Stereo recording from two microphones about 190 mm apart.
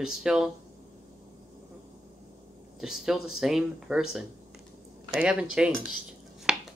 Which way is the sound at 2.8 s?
5° right (ahead or behind).